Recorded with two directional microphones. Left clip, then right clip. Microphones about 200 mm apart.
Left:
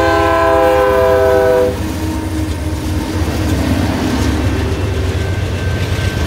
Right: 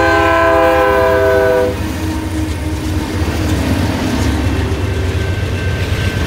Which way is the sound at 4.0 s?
45° right (ahead or behind).